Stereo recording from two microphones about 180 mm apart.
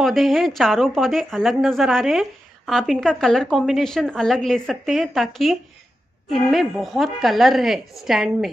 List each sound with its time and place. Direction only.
0.0 s a woman's voice: centre (ahead or behind)